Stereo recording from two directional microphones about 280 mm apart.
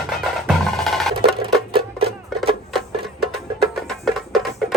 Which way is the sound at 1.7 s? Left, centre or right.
Centre.